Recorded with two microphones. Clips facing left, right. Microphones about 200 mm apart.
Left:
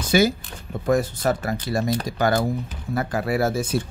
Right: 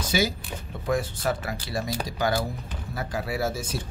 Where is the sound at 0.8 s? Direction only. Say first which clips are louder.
Left 5 dB; 45° left (ahead or behind).